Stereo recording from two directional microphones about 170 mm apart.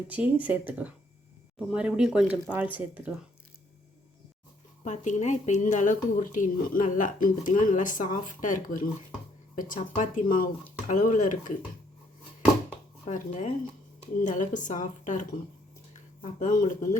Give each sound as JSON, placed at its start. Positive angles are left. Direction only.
{"t": 0.1, "sound": "speech", "side_deg": -10}
{"t": 4.8, "sound": "speech", "side_deg": 45}
{"t": 13.1, "sound": "speech", "side_deg": 45}
{"t": 16.4, "sound": "speech", "side_deg": 50}